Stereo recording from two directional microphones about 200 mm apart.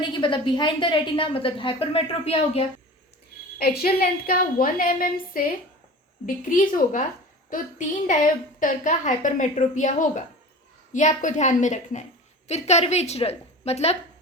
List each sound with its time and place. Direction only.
0.0 s a woman's voice: 25° left (ahead or behind)
3.6 s a woman's voice: 50° left (ahead or behind); by 13.9 s 30° left (ahead or behind)